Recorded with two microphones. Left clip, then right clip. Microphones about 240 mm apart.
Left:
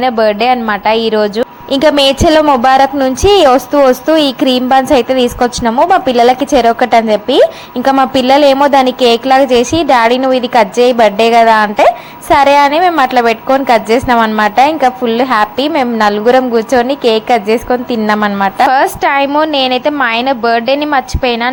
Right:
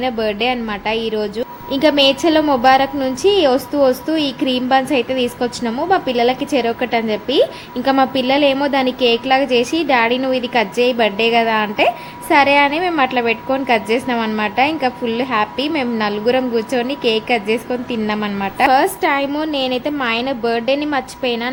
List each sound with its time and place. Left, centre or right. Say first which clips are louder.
0.0 s a woman's voice: left 8 dB; centre